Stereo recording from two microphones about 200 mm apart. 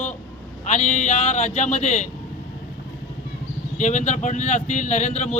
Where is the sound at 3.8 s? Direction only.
40° left (ahead or behind).